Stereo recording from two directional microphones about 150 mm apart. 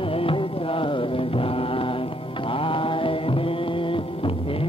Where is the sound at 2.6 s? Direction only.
35° left (ahead or behind).